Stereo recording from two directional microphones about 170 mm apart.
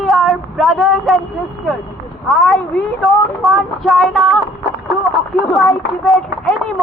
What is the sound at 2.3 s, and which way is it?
Speech, centre (ahead or behind).